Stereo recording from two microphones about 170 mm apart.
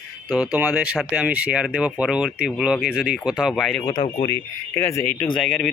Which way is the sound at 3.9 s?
30° left (ahead or behind).